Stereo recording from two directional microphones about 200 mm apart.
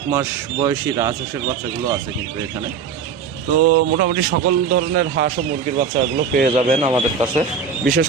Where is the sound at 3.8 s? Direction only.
45° right (ahead or behind).